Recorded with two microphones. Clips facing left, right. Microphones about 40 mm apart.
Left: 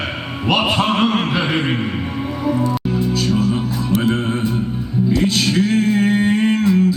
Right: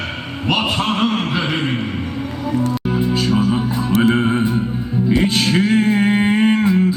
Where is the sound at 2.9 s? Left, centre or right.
Right.